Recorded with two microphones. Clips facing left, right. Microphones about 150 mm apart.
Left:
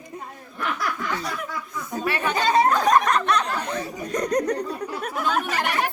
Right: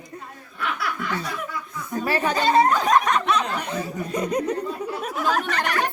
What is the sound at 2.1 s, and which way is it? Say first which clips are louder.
Speech: right 2 dB; 35° right (ahead or behind).